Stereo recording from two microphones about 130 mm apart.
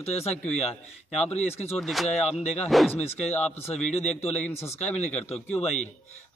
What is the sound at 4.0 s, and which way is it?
Speech, 55° left (ahead or behind).